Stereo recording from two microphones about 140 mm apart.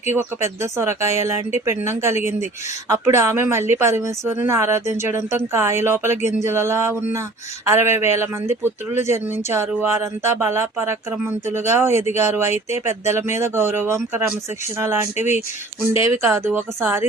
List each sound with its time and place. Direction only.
0.1 s speech: 20° right (ahead or behind)